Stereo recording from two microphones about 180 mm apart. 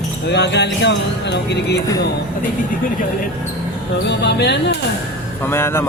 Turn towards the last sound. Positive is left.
turn(degrees=15)  # may be behind; listen again after turning